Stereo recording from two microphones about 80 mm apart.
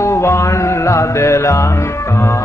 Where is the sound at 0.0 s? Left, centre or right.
Left.